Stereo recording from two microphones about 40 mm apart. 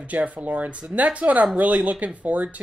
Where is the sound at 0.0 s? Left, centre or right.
Right.